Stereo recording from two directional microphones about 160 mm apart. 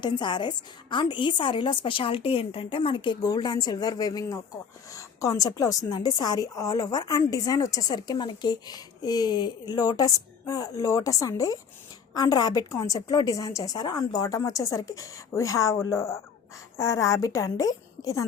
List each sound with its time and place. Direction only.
0.0 s a woman's voice: 30° left (ahead or behind)